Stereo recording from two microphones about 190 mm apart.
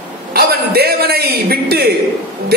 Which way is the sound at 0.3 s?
55° right (ahead or behind).